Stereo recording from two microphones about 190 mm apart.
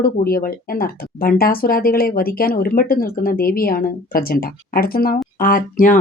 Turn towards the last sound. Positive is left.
turn(degrees=45)  # may be behind; listen again after turning